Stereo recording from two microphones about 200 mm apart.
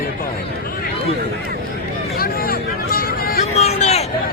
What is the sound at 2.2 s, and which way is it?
Vehicle, 50° left (ahead or behind).